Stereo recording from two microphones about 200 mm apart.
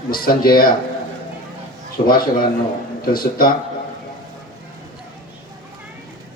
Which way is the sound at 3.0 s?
45° left (ahead or behind).